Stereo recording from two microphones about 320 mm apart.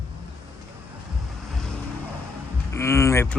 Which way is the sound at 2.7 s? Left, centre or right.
Centre.